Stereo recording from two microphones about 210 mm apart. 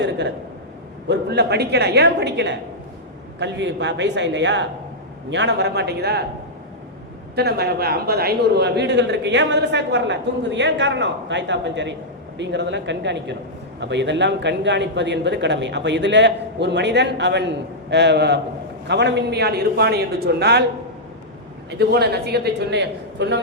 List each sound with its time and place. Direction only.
0.0 s a man's voice: 55° right (ahead or behind)
7.3 s a man's voice: 50° right (ahead or behind)
21.7 s a man's voice: 50° right (ahead or behind)